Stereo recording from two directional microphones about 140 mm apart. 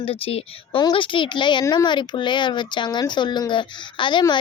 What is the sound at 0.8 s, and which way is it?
A child's voice, 35° left (ahead or behind).